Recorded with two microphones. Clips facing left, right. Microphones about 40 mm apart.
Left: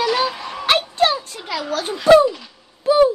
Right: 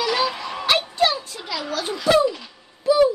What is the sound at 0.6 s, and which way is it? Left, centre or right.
Music, left.